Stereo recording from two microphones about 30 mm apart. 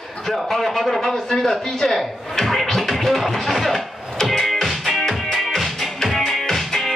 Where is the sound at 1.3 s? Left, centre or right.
Centre.